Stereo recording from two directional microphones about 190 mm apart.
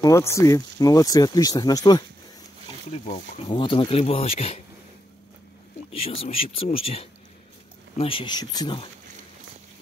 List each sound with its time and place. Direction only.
0.0 s speech: 15° left (ahead or behind)
3.3 s speech: 25° left (ahead or behind)
5.9 s speech: 30° left (ahead or behind)